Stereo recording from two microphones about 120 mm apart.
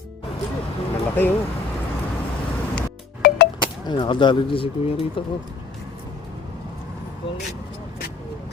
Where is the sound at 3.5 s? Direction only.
40° left (ahead or behind).